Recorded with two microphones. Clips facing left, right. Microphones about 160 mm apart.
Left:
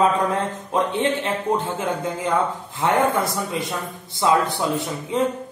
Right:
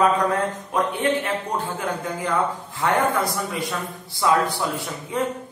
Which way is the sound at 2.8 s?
25° left (ahead or behind).